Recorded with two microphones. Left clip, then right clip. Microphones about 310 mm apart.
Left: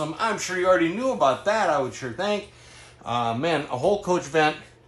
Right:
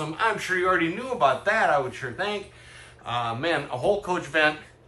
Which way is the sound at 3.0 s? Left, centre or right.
Left.